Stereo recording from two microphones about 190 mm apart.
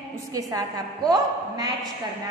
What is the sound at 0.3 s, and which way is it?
A woman's voice, 20° right (ahead or behind).